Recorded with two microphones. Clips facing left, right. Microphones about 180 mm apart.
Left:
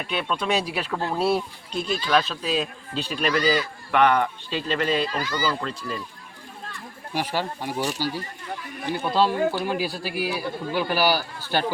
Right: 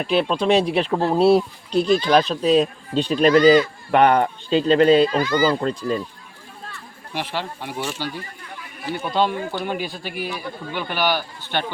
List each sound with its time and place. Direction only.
0.0 s speech: 35° right (ahead or behind)
3.9 s speech: 40° right (ahead or behind)
4.4 s speech: 30° right (ahead or behind)
7.2 s a man's voice: 10° left (ahead or behind)
7.7 s speech: 40° left (ahead or behind)
9.1 s a man's voice: 5° left (ahead or behind)